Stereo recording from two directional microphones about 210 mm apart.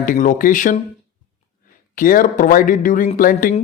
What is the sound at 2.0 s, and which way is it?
Speech, 40° left (ahead or behind).